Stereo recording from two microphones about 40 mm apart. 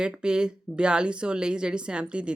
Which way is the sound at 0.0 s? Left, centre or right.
Right.